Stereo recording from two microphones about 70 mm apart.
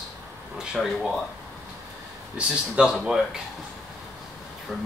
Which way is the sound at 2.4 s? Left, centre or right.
Centre.